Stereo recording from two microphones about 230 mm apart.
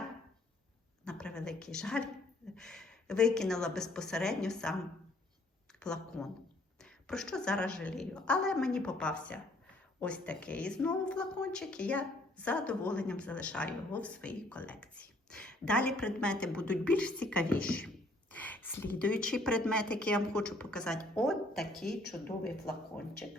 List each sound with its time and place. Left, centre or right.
1.0 s a woman's voice: centre
5.8 s a woman's voice: centre